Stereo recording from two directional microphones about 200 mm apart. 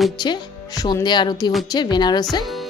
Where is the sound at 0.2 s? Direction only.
20° left (ahead or behind).